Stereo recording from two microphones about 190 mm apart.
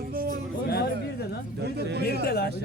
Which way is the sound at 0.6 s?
55° left (ahead or behind).